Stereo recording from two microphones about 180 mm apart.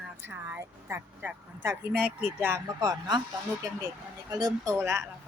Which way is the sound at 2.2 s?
10° right (ahead or behind).